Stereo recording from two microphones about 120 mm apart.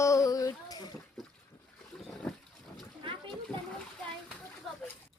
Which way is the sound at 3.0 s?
45° right (ahead or behind).